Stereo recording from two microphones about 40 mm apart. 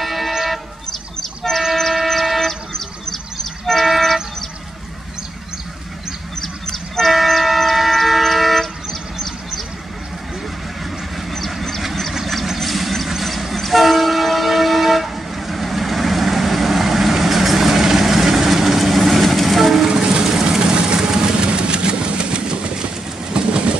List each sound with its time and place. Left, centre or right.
0.0 s music: centre
2.0 s vehicle: centre
6.4 s train: centre
7.2 s vehicle: centre
11.3 s vehicle: centre
13.2 s train: centre
19.9 s vehicle: centre
23.3 s train: right